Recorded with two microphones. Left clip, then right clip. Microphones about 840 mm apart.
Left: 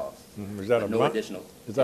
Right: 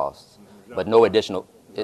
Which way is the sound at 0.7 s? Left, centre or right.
Left.